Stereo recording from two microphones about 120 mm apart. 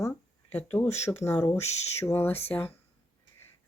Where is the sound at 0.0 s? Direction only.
20° left (ahead or behind).